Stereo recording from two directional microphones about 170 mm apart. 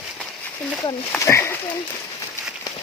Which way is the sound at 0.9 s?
15° left (ahead or behind).